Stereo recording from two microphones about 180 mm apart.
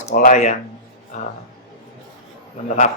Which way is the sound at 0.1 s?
50° left (ahead or behind).